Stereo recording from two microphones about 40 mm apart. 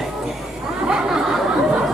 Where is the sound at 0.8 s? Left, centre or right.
Centre.